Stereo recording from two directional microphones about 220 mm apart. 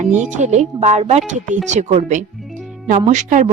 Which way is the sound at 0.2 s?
35° right (ahead or behind).